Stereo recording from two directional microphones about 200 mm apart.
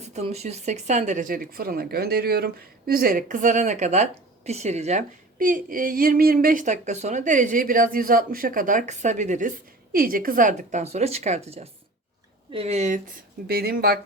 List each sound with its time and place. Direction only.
0.0 s speech: 35° right (ahead or behind)
13.5 s speech: 50° right (ahead or behind)